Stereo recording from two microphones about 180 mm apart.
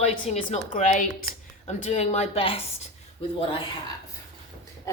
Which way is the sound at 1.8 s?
35° left (ahead or behind).